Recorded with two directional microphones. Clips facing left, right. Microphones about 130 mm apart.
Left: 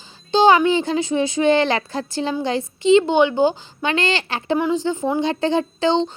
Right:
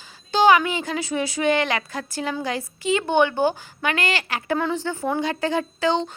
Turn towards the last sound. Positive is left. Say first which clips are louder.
# left 4 dB
turn(degrees=25)  # may be behind; listen again after turning